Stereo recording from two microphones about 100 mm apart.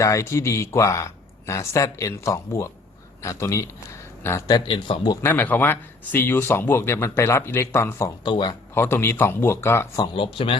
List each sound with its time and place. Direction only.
0.0 s speech: 30° left (ahead or behind)
4.6 s speech: 60° left (ahead or behind)
5.2 s speech: 20° left (ahead or behind)
8.2 s speech: 50° left (ahead or behind)
8.7 s speech: 25° left (ahead or behind)
10.2 s speech: 60° left (ahead or behind)